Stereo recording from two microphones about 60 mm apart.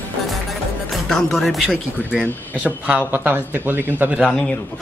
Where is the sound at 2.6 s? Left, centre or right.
Right.